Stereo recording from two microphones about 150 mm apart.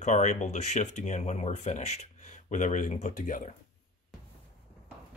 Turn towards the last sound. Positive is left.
turn(degrees=55)  # may be behind; listen again after turning